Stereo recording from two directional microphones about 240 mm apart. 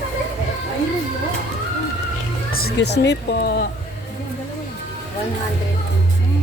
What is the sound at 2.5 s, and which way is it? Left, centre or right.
Speech, left.